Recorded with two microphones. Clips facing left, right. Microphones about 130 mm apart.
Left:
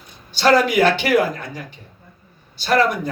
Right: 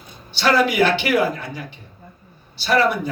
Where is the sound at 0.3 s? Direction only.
45° left (ahead or behind).